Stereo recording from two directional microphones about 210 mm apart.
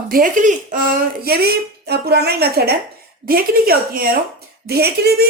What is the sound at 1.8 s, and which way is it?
Speech, 50° right (ahead or behind).